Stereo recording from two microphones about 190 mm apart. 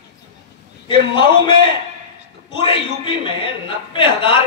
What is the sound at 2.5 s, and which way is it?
A man's voice, 25° left (ahead or behind).